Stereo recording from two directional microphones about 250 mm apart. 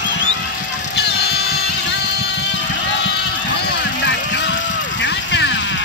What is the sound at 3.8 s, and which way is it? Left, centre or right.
Vehicle, left.